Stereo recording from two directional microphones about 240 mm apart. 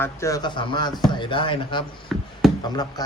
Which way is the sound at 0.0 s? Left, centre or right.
Centre.